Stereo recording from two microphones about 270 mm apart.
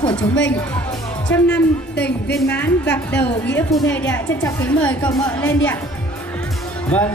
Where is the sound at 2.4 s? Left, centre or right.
Centre.